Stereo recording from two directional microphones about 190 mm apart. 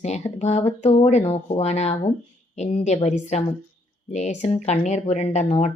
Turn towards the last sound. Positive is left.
turn(degrees=35)  # may be behind; listen again after turning